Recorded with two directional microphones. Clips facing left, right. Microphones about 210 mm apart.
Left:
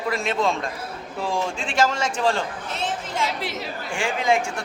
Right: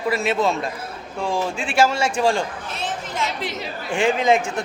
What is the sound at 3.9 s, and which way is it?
Speech, 20° right (ahead or behind).